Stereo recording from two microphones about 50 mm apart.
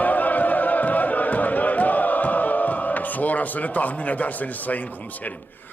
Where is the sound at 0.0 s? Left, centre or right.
Left.